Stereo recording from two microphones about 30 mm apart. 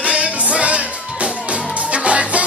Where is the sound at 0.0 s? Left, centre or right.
Right.